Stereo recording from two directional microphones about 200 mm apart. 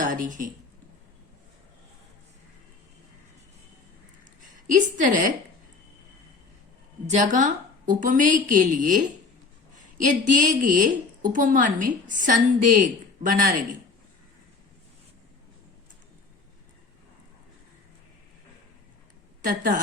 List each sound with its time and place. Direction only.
0.0 s speech: 40° right (ahead or behind)
4.6 s a woman's voice: 40° right (ahead or behind)
7.1 s a woman's voice: 35° right (ahead or behind)
19.5 s a woman's voice: 40° right (ahead or behind)